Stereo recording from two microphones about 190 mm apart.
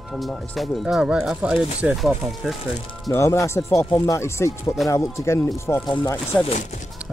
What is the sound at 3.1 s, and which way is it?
Speech, 15° left (ahead or behind).